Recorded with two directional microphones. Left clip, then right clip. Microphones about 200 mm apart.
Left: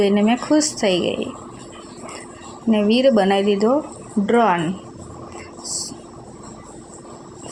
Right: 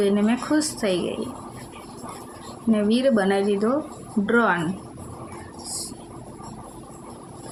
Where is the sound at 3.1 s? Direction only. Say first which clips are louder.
Left 5 dB; 15° left (ahead or behind).